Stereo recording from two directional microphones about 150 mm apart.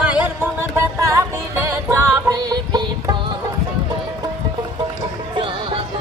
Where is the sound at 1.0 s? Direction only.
20° right (ahead or behind).